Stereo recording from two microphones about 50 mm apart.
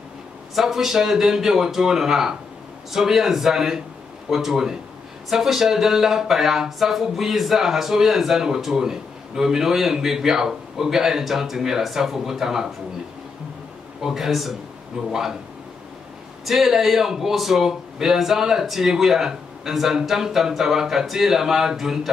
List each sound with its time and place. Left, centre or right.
0.6 s speech: centre
14.0 s speech: centre
16.4 s speech: centre